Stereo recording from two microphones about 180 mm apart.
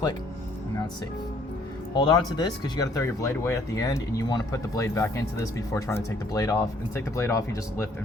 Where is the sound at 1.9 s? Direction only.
20° left (ahead or behind).